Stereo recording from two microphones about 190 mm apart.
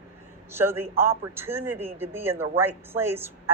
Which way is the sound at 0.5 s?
10° right (ahead or behind).